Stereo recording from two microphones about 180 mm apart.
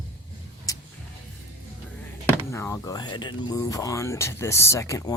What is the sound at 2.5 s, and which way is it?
Speech, 15° left (ahead or behind).